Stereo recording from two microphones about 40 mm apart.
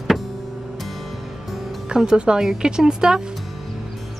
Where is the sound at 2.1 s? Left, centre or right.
Right.